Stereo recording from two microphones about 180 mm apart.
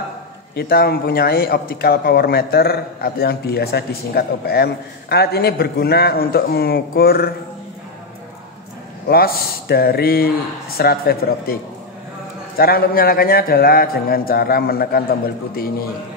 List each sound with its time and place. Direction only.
0.6 s a man's voice: 60° left (ahead or behind)
9.0 s a man's voice: 55° left (ahead or behind)
12.5 s a man's voice: 55° left (ahead or behind)